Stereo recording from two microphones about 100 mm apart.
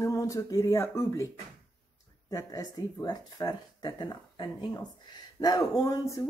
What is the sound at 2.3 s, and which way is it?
Speech, 35° left (ahead or behind).